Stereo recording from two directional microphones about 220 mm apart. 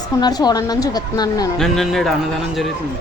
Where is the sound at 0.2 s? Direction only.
20° left (ahead or behind).